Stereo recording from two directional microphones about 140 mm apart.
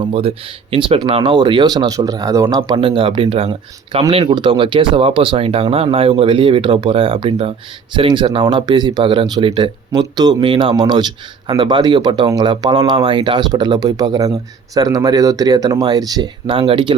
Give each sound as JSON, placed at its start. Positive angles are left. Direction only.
{"t": 0.0, "sound": "speech", "side_deg": -45}
{"t": 2.6, "sound": "speech", "side_deg": -40}